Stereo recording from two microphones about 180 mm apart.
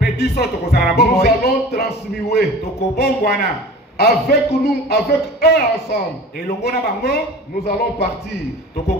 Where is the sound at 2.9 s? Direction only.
60° left (ahead or behind).